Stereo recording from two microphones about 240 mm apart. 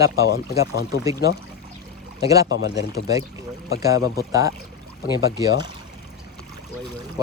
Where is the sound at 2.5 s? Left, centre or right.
Left.